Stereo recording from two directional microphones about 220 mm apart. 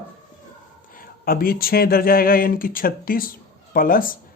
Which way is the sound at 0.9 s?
40° left (ahead or behind).